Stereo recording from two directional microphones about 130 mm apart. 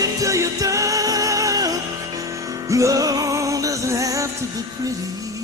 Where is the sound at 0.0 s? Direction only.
25° right (ahead or behind).